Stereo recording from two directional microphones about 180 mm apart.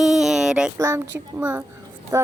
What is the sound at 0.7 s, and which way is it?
Speech, 15° right (ahead or behind).